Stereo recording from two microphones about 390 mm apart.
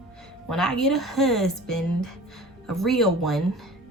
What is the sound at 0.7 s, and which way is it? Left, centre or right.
Speech, centre.